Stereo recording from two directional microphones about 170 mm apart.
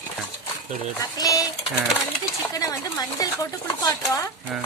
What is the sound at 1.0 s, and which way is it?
Speech, 20° left (ahead or behind).